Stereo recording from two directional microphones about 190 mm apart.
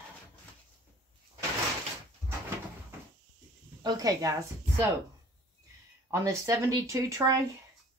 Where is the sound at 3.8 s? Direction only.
20° right (ahead or behind).